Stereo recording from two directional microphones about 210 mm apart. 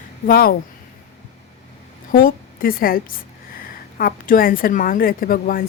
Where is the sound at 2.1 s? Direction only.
45° left (ahead or behind).